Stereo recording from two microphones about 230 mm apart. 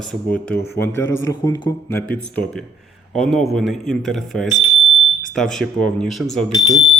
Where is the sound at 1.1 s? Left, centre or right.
Left.